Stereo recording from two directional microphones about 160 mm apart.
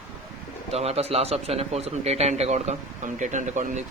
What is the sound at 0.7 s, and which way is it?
Speech, 40° right (ahead or behind).